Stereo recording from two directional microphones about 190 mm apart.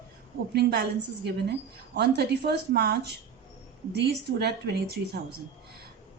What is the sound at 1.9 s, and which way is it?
Speech, 60° right (ahead or behind).